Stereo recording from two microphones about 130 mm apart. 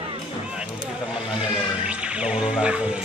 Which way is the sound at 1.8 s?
10° right (ahead or behind).